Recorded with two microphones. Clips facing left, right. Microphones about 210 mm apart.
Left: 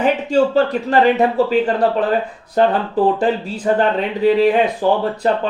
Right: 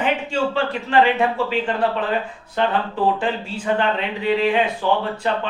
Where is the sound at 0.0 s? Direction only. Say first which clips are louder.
Left 6 dB; 40° left (ahead or behind).